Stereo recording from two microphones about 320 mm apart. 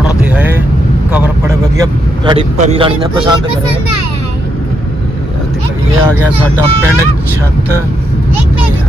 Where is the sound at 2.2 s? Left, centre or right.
Centre.